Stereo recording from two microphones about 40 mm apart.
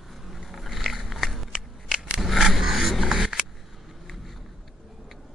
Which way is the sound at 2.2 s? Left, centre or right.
Centre.